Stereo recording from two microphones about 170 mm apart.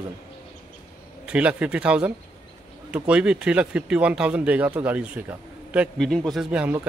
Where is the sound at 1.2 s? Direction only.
5° right (ahead or behind).